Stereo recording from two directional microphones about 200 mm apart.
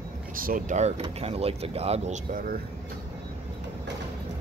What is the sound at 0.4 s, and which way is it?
Speech, 45° right (ahead or behind).